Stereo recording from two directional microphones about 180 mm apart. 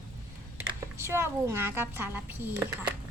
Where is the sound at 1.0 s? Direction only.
15° right (ahead or behind).